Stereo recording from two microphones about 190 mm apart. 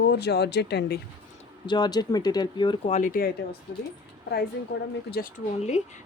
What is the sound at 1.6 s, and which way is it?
Speech, 20° left (ahead or behind).